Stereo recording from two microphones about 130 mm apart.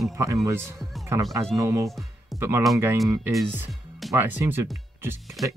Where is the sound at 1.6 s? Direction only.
25° right (ahead or behind).